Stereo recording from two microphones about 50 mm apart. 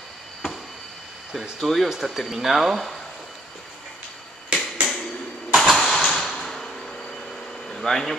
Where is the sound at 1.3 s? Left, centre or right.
Centre.